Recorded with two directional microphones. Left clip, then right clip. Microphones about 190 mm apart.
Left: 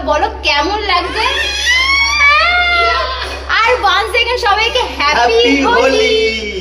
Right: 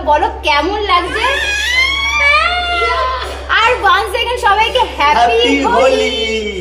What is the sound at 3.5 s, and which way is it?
A woman's voice, 10° right (ahead or behind).